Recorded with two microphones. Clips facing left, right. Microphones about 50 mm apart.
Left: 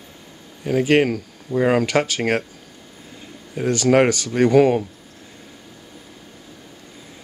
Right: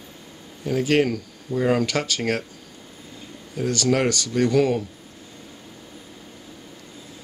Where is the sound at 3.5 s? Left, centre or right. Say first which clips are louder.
Left 5 dB; centre.